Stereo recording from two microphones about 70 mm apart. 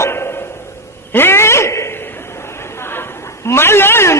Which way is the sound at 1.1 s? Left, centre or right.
Left.